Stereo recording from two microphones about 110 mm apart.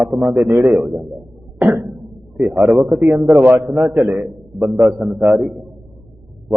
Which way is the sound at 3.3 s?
20° right (ahead or behind).